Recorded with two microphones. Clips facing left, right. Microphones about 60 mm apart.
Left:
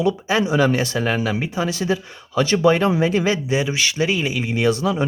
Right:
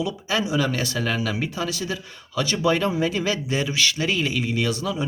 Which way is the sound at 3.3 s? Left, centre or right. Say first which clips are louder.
Left 3 dB; centre.